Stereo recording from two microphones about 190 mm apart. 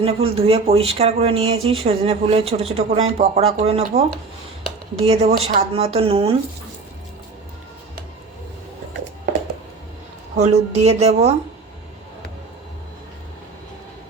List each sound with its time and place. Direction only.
0.0 s speech: 30° right (ahead or behind)
5.0 s speech: 30° right (ahead or behind)
10.3 s speech: 35° right (ahead or behind)